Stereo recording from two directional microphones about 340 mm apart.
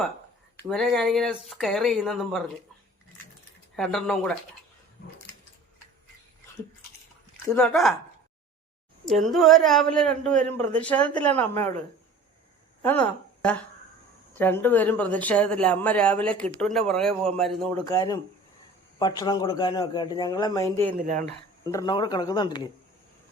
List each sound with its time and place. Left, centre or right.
0.6 s speech: centre
3.8 s speech: centre
7.4 s speech: centre
9.0 s speech: centre
12.8 s a woman's voice: centre
21.0 s speech: right
21.6 s a man's voice: centre